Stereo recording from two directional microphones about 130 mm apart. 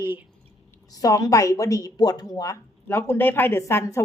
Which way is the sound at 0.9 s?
25° left (ahead or behind).